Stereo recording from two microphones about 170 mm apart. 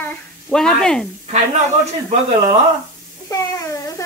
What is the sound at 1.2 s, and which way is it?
Speech, 40° right (ahead or behind).